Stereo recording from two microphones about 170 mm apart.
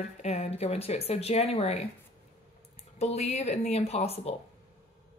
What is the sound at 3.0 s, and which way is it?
A woman's voice, 40° left (ahead or behind).